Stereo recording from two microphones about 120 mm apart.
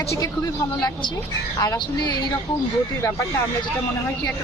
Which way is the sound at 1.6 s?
35° left (ahead or behind).